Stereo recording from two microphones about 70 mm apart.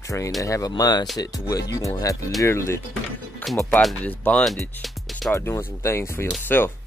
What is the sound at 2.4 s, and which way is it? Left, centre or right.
Speech, left.